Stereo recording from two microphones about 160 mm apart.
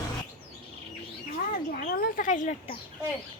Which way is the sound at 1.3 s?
60° left (ahead or behind).